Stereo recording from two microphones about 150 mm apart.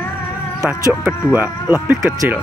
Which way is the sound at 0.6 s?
10° right (ahead or behind).